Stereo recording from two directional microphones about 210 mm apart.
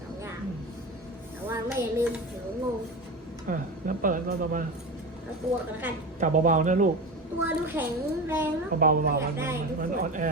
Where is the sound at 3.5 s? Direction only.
40° right (ahead or behind).